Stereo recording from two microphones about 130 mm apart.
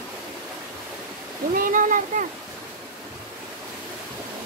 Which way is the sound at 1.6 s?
90° right.